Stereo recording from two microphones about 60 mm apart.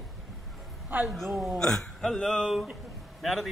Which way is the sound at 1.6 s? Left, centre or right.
Centre.